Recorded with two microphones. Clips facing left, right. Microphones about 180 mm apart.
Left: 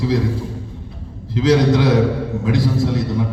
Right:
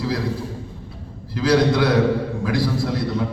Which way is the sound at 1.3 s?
20° left (ahead or behind).